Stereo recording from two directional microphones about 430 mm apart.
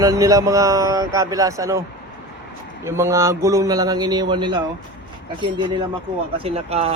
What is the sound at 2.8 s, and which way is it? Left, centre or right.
Speech, centre.